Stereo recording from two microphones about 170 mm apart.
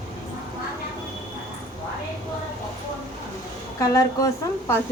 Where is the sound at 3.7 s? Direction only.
20° left (ahead or behind).